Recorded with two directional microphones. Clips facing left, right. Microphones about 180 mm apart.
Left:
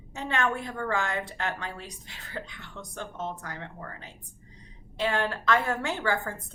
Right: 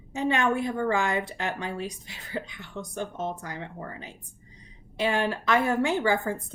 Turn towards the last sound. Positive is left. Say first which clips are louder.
# right 5 dB
turn(degrees=-15)  # may be behind; listen again after turning